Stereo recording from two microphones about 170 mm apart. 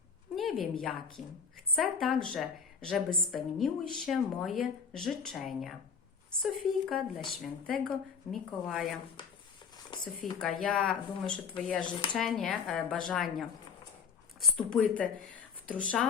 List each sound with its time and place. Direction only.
0.3 s speech: centre (ahead or behind)
9.2 s speech: 30° left (ahead or behind)
10.6 s speech: 5° left (ahead or behind)